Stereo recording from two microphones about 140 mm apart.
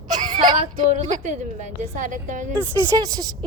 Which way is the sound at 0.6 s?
55° right (ahead or behind).